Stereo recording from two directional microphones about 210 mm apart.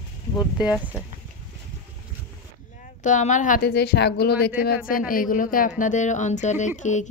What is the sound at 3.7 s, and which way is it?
Speech, 50° left (ahead or behind).